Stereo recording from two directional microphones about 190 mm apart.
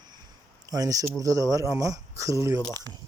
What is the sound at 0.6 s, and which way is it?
Speech, 20° right (ahead or behind).